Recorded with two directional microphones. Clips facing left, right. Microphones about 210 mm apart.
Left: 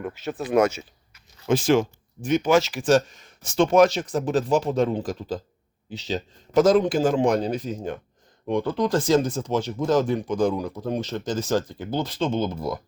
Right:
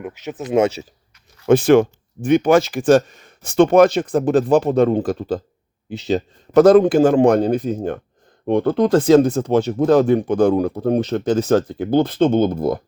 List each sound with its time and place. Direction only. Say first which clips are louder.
0.0 s speech: right 1 dB; 15° right (ahead or behind)
0.5 s speech: right 3 dB; 30° right (ahead or behind)
1.5 s speech: right 8 dB; 60° right (ahead or behind)